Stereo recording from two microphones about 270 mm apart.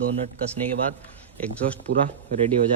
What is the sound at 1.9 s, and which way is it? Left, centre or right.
Speech, right.